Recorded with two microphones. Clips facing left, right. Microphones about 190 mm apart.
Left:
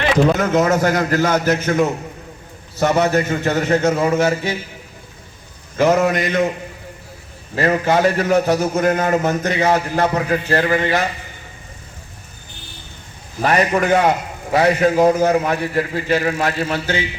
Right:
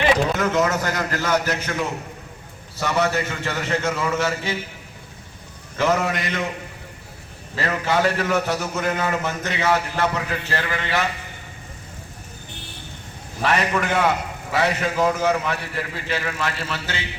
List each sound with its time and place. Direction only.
0.3 s a man's voice: 45° left (ahead or behind)
5.7 s a man's voice: 45° left (ahead or behind)
7.5 s a man's voice: 45° left (ahead or behind)
13.4 s a man's voice: 45° left (ahead or behind)